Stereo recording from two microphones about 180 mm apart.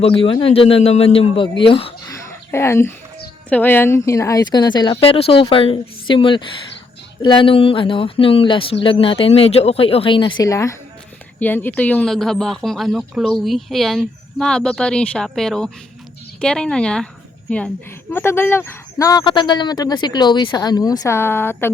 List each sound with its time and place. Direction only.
0.0 s speech: 30° left (ahead or behind)
2.5 s speech: 15° left (ahead or behind)
10.4 s speech: 15° left (ahead or behind)
18.1 s speech: 10° left (ahead or behind)